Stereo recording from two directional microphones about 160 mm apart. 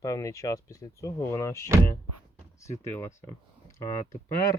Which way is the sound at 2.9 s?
15° left (ahead or behind).